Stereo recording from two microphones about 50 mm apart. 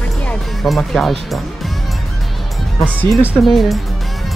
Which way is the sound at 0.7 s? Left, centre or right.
Centre.